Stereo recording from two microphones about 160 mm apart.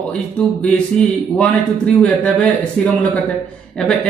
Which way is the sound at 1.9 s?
5° left (ahead or behind).